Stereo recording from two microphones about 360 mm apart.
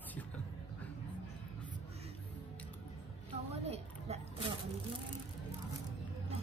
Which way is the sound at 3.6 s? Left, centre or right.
Centre.